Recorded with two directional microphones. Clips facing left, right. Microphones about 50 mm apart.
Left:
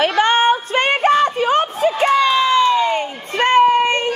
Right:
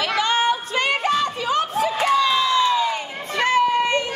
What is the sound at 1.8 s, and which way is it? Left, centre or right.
Crowd, left.